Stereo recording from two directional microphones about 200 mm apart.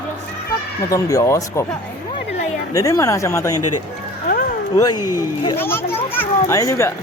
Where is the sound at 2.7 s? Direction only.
15° left (ahead or behind).